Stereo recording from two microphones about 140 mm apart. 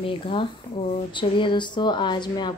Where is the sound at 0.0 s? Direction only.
40° left (ahead or behind).